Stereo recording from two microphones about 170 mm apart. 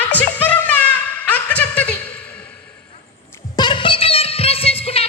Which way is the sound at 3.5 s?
25° left (ahead or behind).